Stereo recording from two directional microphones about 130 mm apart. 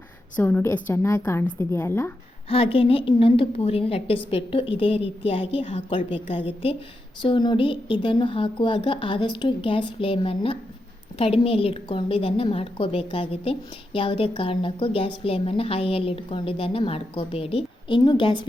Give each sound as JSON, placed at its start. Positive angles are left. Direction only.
{"t": 0.3, "sound": "a woman's voice", "side_deg": 15}
{"t": 2.5, "sound": "a woman's voice", "side_deg": 45}